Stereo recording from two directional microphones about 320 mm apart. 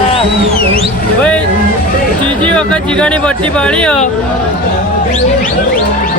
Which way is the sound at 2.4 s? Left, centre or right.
Centre.